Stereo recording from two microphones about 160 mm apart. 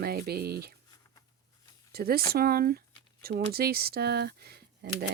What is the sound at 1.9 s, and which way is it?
A woman's voice, 75° right (ahead or behind).